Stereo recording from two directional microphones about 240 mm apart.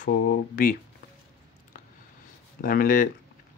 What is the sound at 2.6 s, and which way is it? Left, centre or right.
Speech, left.